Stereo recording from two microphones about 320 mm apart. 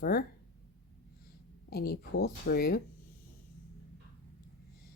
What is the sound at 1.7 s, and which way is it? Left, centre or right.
Speech, left.